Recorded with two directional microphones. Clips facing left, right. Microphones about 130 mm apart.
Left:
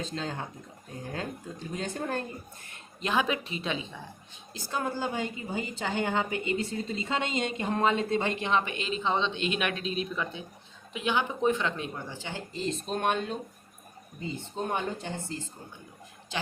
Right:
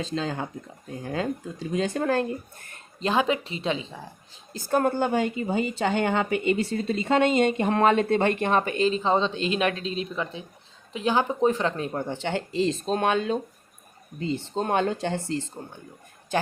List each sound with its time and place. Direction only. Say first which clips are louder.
0.0 s speech: right 6 dB; 90° right
1.7 s speech: right 9 dB; 90° right
3.0 s a woman's voice: right 5 dB; 30° right (ahead or behind)
4.5 s a woman's voice: right 9 dB; 55° right (ahead or behind); by 12.0 s 40° right (ahead or behind)
12.0 s speech: right 10 dB; 65° right (ahead or behind); by 13.4 s 90° right
14.2 s speech: right 7 dB; 80° right
16.3 s a woman's voice: right 9 dB; 50° right (ahead or behind)